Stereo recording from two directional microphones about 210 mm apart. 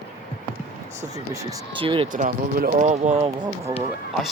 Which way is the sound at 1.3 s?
20° right (ahead or behind).